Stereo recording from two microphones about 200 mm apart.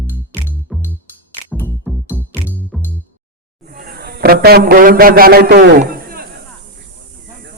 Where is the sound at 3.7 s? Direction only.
50° right (ahead or behind).